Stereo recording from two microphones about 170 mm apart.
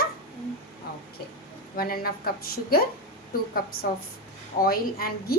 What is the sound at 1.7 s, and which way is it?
Speech, 60° left (ahead or behind).